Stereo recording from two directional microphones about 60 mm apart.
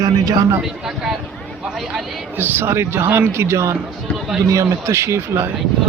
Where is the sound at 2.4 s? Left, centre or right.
Right.